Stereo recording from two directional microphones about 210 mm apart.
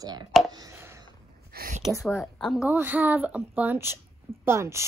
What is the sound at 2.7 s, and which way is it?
A woman's voice, 10° right (ahead or behind).